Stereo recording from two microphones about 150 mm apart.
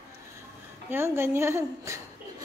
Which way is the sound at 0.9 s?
15° right (ahead or behind).